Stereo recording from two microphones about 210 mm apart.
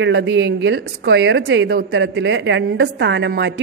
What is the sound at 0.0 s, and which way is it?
A woman's voice, 60° right (ahead or behind).